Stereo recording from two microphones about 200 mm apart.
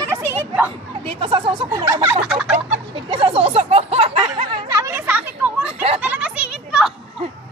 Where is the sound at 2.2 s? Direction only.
5° right (ahead or behind).